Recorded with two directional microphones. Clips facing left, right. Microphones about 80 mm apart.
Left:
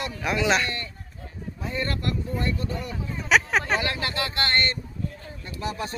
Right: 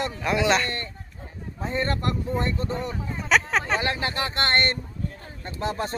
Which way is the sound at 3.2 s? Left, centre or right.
Centre.